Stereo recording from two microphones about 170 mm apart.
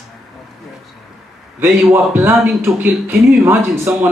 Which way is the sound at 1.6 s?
10° right (ahead or behind).